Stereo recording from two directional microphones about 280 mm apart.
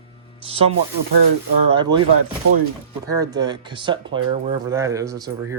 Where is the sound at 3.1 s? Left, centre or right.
Centre.